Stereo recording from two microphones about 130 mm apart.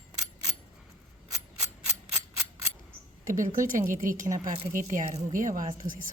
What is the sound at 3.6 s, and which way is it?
A woman's voice, 85° right.